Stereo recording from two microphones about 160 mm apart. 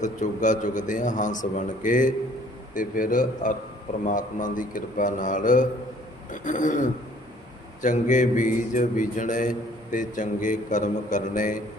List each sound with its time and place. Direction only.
0.0 s a man's voice: 50° left (ahead or behind)